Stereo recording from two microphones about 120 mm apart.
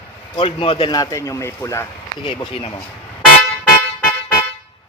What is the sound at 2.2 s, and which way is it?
Speech, 45° left (ahead or behind).